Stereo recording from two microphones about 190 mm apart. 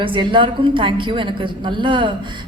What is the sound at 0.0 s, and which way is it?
A woman's voice, 25° right (ahead or behind).